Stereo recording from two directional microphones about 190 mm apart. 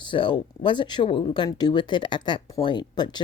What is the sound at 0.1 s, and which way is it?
Speech, 25° left (ahead or behind).